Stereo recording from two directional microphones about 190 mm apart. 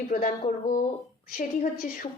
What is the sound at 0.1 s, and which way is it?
Speech, 45° left (ahead or behind).